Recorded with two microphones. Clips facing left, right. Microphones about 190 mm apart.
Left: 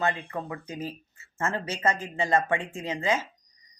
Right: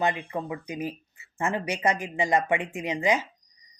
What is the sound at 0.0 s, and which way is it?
Speech, 15° right (ahead or behind).